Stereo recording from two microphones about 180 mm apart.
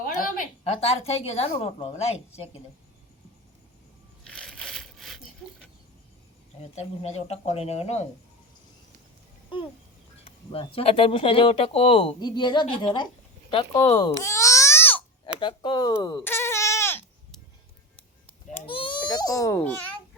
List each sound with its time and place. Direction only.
0.0 s a sound: 50° left (ahead or behind)
0.6 s speech: 35° left (ahead or behind)
4.2 s crushing: 5° left (ahead or behind)
6.6 s speech: 35° left (ahead or behind)
10.5 s speech: 30° left (ahead or behind)
14.2 s babbling: 15° left (ahead or behind)
15.4 s speech: 25° left (ahead or behind)
16.2 s goat: 15° left (ahead or behind)
18.6 s baby cry: 30° left (ahead or behind)